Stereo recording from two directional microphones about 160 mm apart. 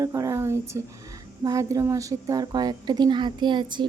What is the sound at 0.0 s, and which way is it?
A woman's voice, 20° right (ahead or behind).